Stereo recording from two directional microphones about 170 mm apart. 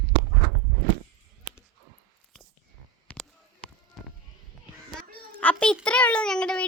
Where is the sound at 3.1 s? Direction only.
5° left (ahead or behind).